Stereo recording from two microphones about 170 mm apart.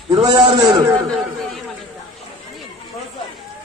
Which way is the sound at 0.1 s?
25° right (ahead or behind).